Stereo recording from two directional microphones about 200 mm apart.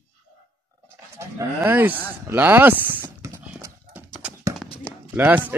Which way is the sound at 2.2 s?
10° right (ahead or behind).